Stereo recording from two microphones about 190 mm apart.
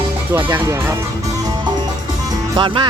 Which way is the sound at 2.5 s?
25° right (ahead or behind).